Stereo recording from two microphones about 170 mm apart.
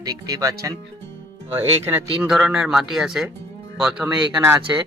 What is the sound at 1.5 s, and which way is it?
Speech, 10° right (ahead or behind).